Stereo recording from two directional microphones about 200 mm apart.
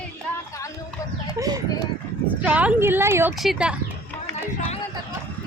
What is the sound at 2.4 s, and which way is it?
Speech, 5° right (ahead or behind).